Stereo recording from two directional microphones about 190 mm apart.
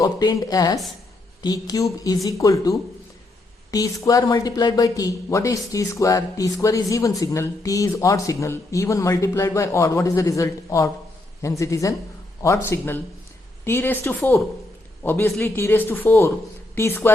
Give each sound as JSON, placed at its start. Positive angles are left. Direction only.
{"t": 0.0, "sound": "speech", "side_deg": 20}